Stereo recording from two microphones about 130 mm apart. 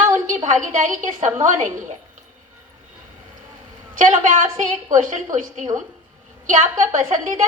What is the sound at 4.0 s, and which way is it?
A woman's voice, 75° right (ahead or behind).